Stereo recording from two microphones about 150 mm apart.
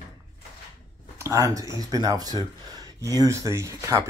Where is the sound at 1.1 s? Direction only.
20° right (ahead or behind).